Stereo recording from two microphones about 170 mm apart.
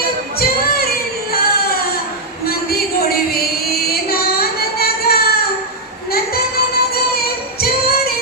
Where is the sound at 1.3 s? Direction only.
65° left (ahead or behind).